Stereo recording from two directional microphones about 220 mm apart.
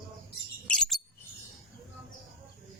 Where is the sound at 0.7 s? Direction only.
Centre (ahead or behind).